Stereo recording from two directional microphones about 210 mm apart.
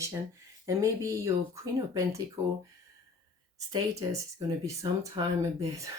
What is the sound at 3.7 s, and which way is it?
Speech, 15° right (ahead or behind).